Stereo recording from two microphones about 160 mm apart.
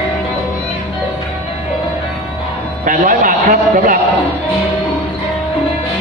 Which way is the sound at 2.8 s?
60° right (ahead or behind).